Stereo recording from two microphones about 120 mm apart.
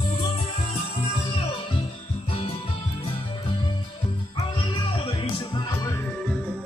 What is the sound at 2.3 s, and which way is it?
Music, 55° left (ahead or behind).